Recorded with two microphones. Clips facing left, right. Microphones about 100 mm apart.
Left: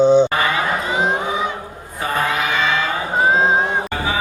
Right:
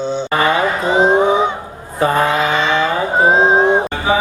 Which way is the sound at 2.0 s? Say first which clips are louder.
Right 6 dB; 30° right (ahead or behind).